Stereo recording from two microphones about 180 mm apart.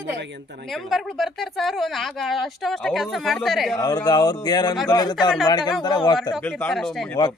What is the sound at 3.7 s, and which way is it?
Speech, 20° left (ahead or behind).